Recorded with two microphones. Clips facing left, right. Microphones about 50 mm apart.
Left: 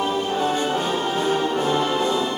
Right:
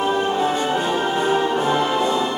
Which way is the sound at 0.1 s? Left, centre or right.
Right.